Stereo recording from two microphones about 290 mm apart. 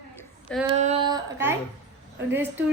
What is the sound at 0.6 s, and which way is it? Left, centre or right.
A woman's voice, right.